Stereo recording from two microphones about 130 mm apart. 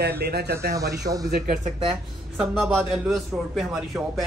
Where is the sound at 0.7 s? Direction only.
25° right (ahead or behind).